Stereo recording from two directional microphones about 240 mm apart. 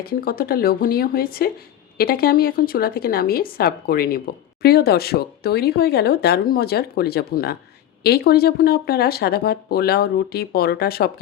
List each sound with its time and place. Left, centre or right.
0.0 s speech: left